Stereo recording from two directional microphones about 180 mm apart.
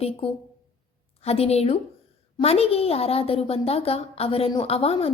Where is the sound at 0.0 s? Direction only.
30° left (ahead or behind).